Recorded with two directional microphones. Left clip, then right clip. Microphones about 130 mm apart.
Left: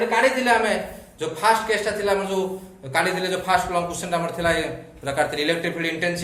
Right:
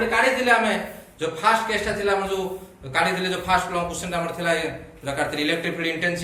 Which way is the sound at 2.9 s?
75° left (ahead or behind).